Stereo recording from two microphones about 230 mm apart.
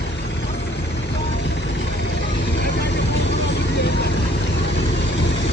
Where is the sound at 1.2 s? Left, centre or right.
Left.